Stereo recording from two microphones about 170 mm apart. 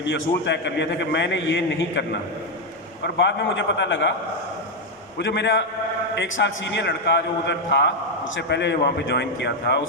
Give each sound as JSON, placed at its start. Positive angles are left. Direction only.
{"t": 0.0, "sound": "a man's voice", "side_deg": 90}
{"t": 5.1, "sound": "a man's voice", "side_deg": 90}